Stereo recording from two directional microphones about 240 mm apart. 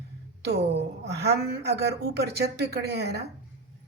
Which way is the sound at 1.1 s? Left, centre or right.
Right.